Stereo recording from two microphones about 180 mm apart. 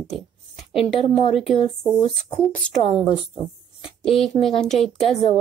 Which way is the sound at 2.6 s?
5° left (ahead or behind).